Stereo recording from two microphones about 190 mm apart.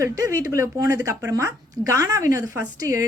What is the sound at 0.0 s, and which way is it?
Speech, 15° right (ahead or behind).